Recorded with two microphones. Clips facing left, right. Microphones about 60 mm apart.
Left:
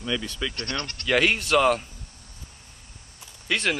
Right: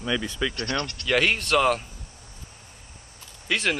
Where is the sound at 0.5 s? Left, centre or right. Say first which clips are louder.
Right 3 dB; right.